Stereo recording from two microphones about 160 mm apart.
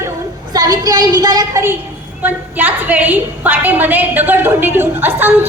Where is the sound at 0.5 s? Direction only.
25° right (ahead or behind).